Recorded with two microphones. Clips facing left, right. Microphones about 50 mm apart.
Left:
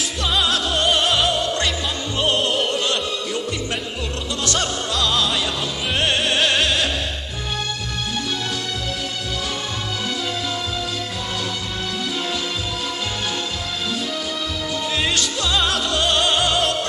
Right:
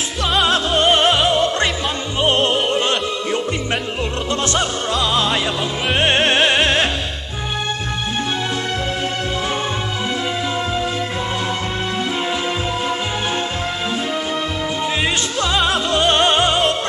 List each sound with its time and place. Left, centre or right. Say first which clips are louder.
0.4 s music: right 5 dB; right
4.5 s music: right 3 dB; right
15.4 s music: right 4 dB; right